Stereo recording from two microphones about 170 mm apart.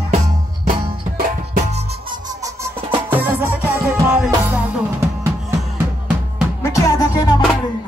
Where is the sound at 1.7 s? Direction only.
40° right (ahead or behind).